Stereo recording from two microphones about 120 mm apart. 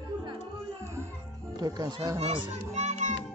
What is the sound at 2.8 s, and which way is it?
Music, 75° right (ahead or behind).